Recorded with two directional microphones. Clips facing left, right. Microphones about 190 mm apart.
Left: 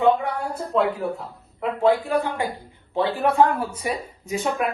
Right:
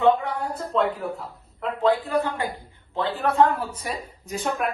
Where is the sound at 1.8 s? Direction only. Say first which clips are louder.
Left 2 dB; 15° left (ahead or behind).